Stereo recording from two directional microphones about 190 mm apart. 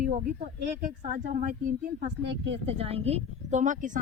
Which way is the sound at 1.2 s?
45° right (ahead or behind).